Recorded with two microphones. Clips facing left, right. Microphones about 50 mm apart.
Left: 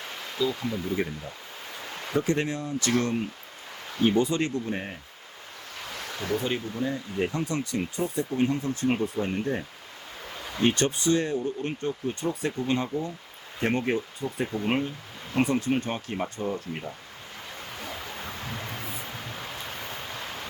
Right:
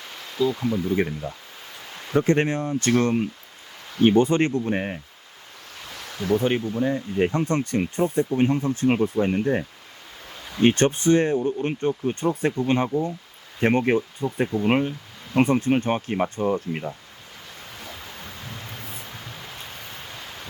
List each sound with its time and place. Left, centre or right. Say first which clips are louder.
0.5 s speech: right 6 dB; centre
2.1 s speech: right 6 dB; right
6.3 s speech: right 7 dB; right
14.4 s speech: right 6 dB; centre
14.7 s speech: right 6 dB; right
18.3 s a sound: left 2 dB; left